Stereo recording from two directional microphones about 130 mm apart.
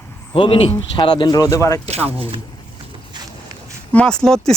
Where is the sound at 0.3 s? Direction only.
45° left (ahead or behind); by 1.8 s 25° left (ahead or behind).